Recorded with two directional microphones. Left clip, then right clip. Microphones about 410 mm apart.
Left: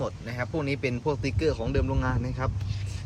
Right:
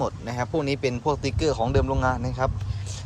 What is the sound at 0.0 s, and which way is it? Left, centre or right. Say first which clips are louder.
A man's voice: right 5 dB; centre.